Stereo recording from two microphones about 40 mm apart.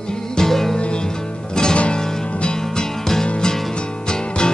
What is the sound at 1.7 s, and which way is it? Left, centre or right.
Music, left.